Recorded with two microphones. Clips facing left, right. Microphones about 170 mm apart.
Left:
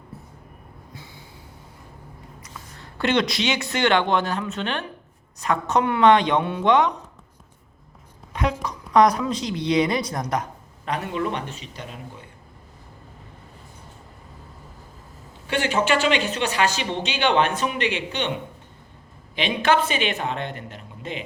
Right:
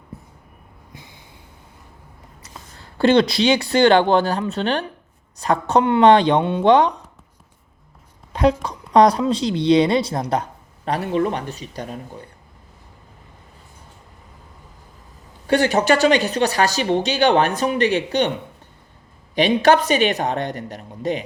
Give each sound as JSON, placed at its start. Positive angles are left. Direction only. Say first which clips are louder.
{"t": 0.9, "sound": "snort", "louder": "even", "side_deg": -15}
{"t": 2.4, "sound": "speech", "louder": "right 3 dB", "side_deg": -35}
{"t": 8.3, "sound": "speech", "louder": "right 7 dB", "side_deg": -35}
{"t": 15.4, "sound": "speech", "louder": "right 6 dB", "side_deg": -40}
{"t": 19.4, "sound": "speech", "louder": "right 6 dB", "side_deg": -40}